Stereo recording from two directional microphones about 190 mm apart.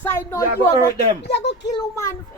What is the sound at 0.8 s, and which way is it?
Speech, 60° left (ahead or behind).